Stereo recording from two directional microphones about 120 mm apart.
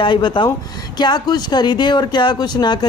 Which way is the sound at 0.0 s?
40° left (ahead or behind).